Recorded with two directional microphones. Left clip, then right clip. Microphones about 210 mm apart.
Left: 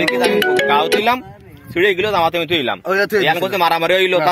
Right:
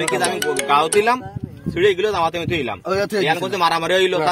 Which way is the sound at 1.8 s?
35° left (ahead or behind).